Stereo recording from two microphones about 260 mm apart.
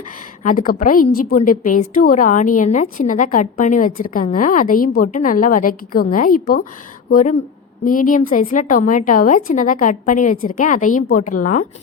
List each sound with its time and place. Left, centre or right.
0.4 s a woman's voice: left